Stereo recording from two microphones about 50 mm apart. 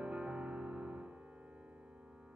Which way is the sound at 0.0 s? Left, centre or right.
Right.